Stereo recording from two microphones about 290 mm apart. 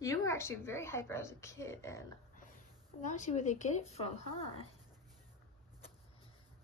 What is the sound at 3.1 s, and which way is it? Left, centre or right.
Speech, left.